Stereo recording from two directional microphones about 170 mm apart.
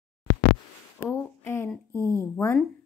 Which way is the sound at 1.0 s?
15° left (ahead or behind).